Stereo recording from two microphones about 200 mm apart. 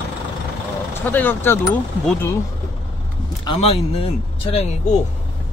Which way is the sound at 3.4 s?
30° left (ahead or behind).